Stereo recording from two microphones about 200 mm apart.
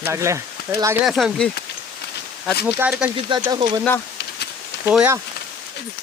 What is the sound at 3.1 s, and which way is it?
Speech, 25° right (ahead or behind).